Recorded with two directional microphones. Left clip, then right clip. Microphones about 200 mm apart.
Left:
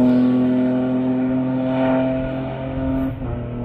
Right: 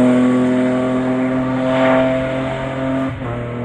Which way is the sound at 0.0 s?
10° right (ahead or behind).